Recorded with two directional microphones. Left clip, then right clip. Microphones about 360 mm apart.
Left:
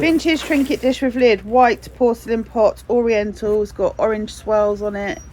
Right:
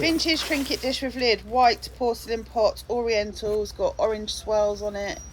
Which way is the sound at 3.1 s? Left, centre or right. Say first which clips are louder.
Left 6 dB; centre.